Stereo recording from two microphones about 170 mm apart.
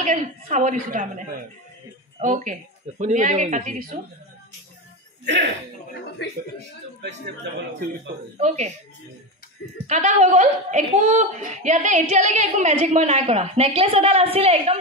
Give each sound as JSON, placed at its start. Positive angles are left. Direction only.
{"t": 0.0, "sound": "a woman's voice", "side_deg": -50}
{"t": 5.2, "sound": "speech", "side_deg": -90}
{"t": 6.2, "sound": "speech", "side_deg": 90}
{"t": 8.4, "sound": "a woman's voice", "side_deg": -45}
{"t": 9.8, "sound": "a woman's voice", "side_deg": -45}